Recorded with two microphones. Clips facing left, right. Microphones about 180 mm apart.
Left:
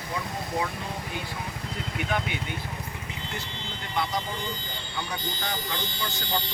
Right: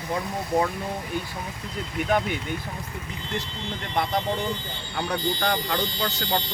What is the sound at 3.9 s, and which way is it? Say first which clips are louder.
Speech: right 4 dB; 55° right (ahead or behind).